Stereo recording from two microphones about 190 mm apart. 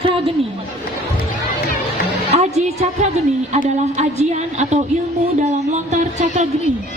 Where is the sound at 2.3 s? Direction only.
35° right (ahead or behind).